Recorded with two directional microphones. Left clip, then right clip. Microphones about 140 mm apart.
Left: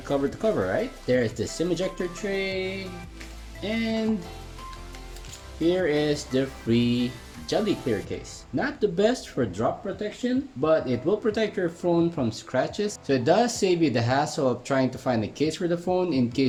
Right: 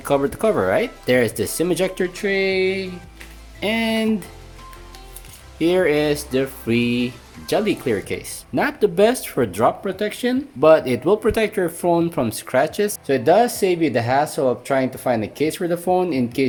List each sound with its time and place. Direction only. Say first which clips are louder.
0.0 s speech: right 7 dB; 55° right (ahead or behind); by 2.8 s 90° right
3.6 s speech: right 8 dB; 65° right (ahead or behind)
5.5 s speech: right 6 dB; 60° right (ahead or behind)
13.1 s speech: right 6 dB; 30° right (ahead or behind)